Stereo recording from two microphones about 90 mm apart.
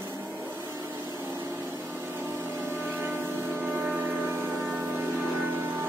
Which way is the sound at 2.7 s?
20° right (ahead or behind).